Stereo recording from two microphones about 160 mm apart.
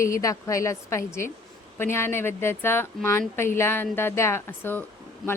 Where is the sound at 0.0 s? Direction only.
20° left (ahead or behind).